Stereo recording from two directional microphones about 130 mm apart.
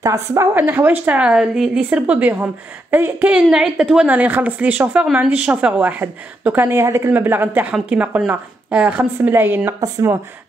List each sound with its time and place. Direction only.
0.0 s a woman's voice: 25° right (ahead or behind)
0.6 s a woman's voice: 15° right (ahead or behind)
9.8 s a woman's voice: 30° right (ahead or behind)